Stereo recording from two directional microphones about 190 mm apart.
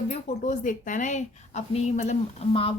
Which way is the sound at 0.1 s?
45° left (ahead or behind).